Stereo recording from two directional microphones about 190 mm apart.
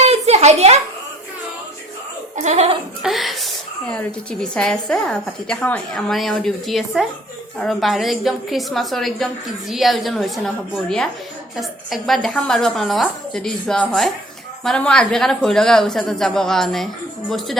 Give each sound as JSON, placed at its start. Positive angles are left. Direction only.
{"t": 0.0, "sound": "a sound", "side_deg": -35}
{"t": 2.3, "sound": "speech", "side_deg": -40}
{"t": 3.0, "sound": "a woman's voice", "side_deg": 0}